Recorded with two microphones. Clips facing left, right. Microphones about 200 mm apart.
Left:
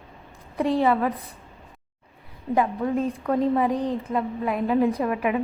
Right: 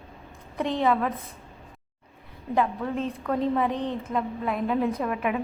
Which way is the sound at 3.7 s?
35° left (ahead or behind).